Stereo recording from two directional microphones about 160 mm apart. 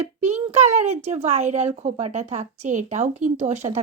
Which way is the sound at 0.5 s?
45° right (ahead or behind).